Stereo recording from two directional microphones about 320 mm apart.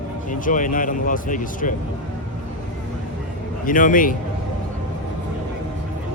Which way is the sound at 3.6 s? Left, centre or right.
Left.